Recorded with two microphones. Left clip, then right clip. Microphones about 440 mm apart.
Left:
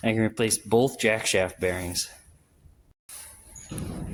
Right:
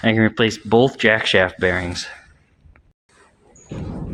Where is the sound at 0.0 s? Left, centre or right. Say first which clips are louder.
Right 8 dB; left.